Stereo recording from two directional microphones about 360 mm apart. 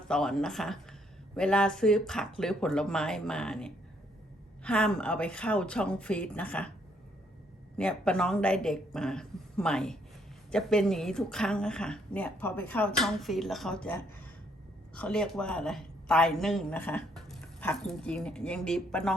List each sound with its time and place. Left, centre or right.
0.1 s a woman's voice: centre
7.8 s a woman's voice: centre